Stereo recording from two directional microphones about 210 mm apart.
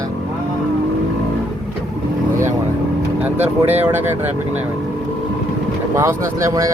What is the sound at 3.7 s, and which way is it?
Speech, 10° right (ahead or behind).